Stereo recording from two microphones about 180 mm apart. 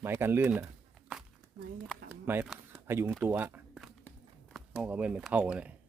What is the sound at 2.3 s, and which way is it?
Speech, 10° right (ahead or behind).